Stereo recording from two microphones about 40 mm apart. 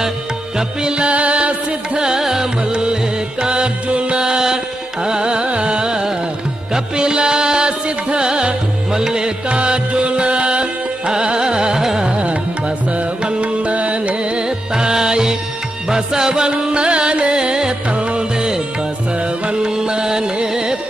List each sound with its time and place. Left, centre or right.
0.6 s music: right
2.0 s music: centre
5.0 s carnatic music: right
6.7 s music: right
11.8 s carnatic music: centre
12.2 s music: right
14.8 s music: centre